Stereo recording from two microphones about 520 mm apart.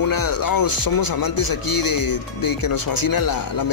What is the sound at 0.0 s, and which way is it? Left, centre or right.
Speech, left.